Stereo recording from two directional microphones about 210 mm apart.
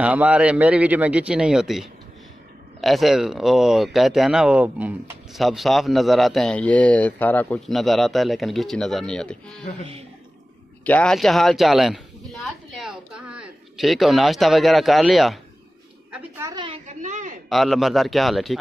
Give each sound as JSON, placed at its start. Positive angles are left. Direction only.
{"t": 0.0, "sound": "speech", "side_deg": -5}
{"t": 10.8, "sound": "speech", "side_deg": 5}
{"t": 16.1, "sound": "a sound", "side_deg": -15}
{"t": 17.5, "sound": "speech", "side_deg": 0}